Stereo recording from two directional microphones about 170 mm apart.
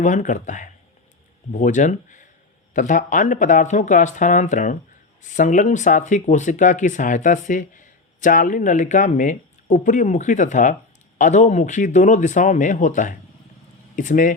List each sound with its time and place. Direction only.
0.0 s speech: 45° left (ahead or behind)